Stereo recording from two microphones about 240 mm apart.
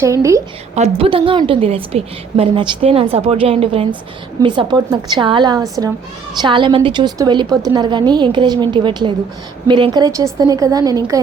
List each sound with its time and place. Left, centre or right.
0.0 s a woman's voice: centre
0.8 s a woman's voice: right